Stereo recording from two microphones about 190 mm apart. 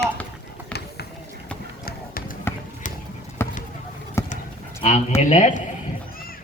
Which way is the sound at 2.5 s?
10° left (ahead or behind).